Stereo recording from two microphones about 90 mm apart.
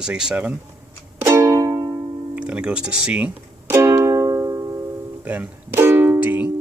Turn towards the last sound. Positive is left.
turn(degrees=-20)  # may be behind; listen again after turning